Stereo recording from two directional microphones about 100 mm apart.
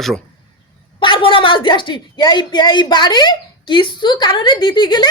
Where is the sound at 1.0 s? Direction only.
55° left (ahead or behind).